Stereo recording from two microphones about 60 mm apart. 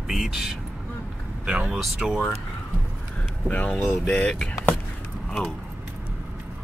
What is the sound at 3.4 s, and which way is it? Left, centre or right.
Speech, left.